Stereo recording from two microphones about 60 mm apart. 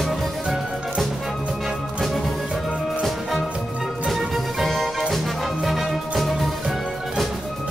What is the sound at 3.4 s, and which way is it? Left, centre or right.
Music, centre.